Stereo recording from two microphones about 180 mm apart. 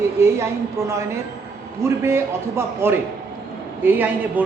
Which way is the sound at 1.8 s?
15° right (ahead or behind).